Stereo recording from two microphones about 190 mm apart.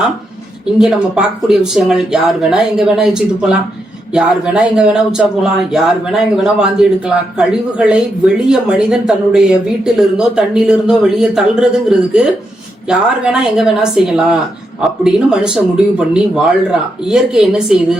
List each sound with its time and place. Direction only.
0.8 s speech: centre (ahead or behind)